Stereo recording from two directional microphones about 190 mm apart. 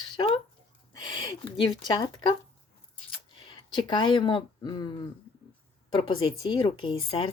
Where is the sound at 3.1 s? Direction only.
25° left (ahead or behind).